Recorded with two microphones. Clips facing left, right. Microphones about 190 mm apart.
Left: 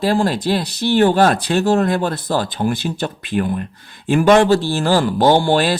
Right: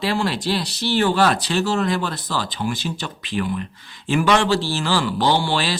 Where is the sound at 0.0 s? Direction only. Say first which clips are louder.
Left 5 dB; 45° left (ahead or behind).